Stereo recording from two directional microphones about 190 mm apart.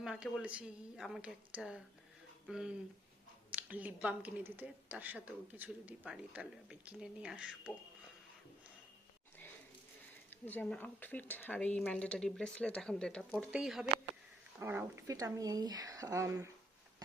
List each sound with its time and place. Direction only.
0.0 s a woman's voice: 5° right (ahead or behind)
10.2 s a woman's voice: 10° left (ahead or behind); by 16.5 s 15° right (ahead or behind)